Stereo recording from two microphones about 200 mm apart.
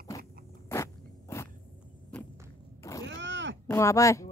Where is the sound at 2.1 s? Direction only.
5° left (ahead or behind).